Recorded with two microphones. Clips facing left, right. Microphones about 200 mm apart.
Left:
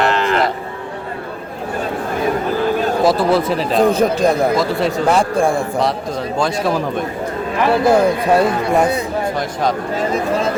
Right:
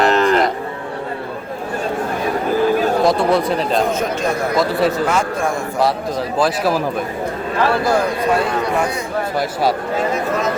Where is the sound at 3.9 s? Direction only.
35° left (ahead or behind).